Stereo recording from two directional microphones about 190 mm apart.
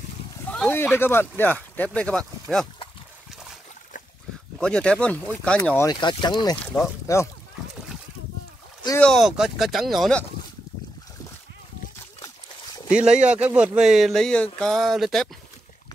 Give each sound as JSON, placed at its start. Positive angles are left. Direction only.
{"t": 0.5, "sound": "speech", "side_deg": 10}
{"t": 4.6, "sound": "speech", "side_deg": 5}
{"t": 5.9, "sound": "speech", "side_deg": 25}
{"t": 9.0, "sound": "speech", "side_deg": 0}
{"t": 12.9, "sound": "speech", "side_deg": -5}